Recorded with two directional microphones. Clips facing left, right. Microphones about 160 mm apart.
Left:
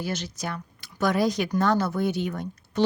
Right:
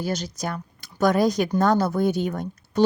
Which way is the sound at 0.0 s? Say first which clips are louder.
Right 3 dB; 40° right (ahead or behind).